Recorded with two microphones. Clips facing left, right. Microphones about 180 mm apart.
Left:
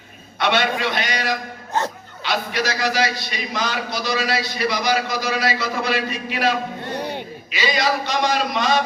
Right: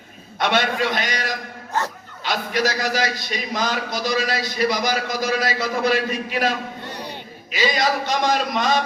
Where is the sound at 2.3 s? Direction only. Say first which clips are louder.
Right 1 dB; 45° right (ahead or behind).